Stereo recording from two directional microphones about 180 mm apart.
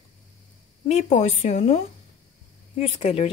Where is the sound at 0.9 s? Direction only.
40° left (ahead or behind).